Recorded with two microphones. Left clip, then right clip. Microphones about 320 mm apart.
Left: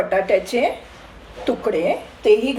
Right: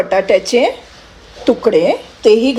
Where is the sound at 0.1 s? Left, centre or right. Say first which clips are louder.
Right 9 dB; right.